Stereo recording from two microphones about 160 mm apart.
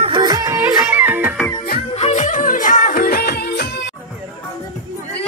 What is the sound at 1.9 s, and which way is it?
Music, 45° left (ahead or behind).